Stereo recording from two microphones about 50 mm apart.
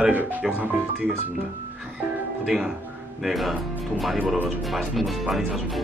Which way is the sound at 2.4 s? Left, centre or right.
Centre.